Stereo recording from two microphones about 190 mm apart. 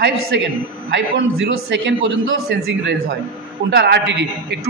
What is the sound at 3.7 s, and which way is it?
Speech, 65° right (ahead or behind).